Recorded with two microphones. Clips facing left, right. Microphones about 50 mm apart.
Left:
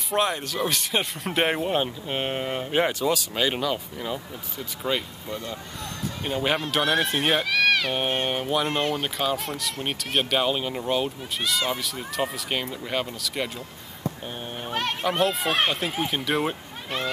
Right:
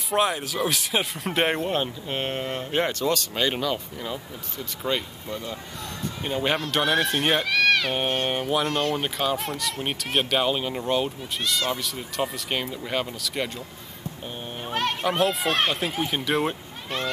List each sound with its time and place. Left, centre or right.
0.1 s speech: centre
8.6 s speech: centre
8.9 s speech: centre
14.6 s speech: centre